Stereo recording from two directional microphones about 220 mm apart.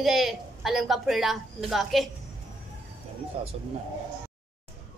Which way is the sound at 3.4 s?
25° right (ahead or behind).